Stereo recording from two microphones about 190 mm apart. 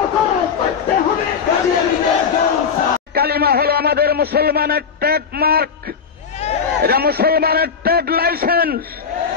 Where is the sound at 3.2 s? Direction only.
55° right (ahead or behind).